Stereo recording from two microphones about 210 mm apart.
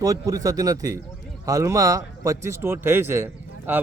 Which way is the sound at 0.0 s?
15° right (ahead or behind).